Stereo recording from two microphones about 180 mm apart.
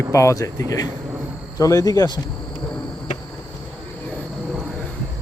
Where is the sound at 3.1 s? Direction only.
40° left (ahead or behind).